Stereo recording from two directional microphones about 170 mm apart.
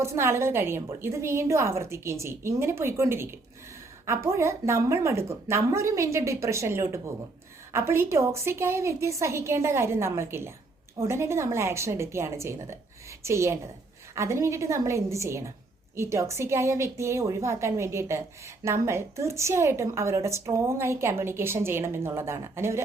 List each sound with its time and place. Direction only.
0.0 s a woman's voice: 15° right (ahead or behind)